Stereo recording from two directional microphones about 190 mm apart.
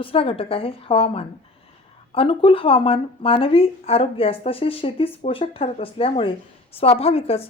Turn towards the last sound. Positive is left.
turn(degrees=30)  # may be behind; listen again after turning